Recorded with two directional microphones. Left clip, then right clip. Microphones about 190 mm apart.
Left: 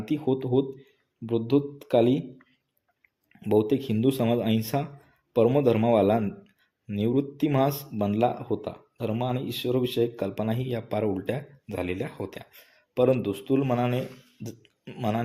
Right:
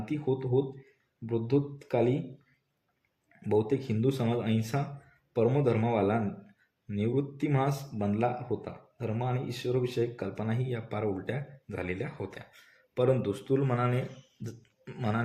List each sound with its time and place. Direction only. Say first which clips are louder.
0.0 s speech: left 5 dB; 30° left (ahead or behind)
3.7 s speech: left 5 dB; 30° left (ahead or behind)